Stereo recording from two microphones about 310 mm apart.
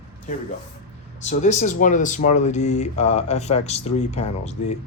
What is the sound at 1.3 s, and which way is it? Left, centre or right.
Speech, left.